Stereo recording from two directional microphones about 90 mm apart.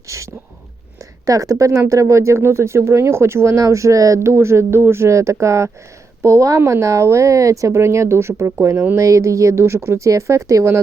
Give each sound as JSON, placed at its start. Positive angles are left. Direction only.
{"t": 0.1, "sound": "a sound", "side_deg": -35}
{"t": 1.2, "sound": "speech", "side_deg": -40}
{"t": 9.0, "sound": "speech", "side_deg": -35}